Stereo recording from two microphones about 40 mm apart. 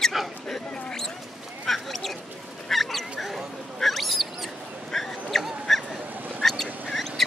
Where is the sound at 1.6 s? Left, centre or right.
Centre.